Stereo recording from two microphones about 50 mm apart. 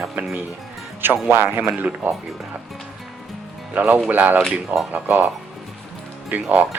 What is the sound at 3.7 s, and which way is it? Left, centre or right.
Speech, right.